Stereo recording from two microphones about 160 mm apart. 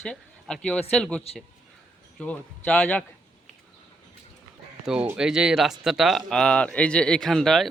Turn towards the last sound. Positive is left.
turn(degrees=0)  # may be behind; listen again after turning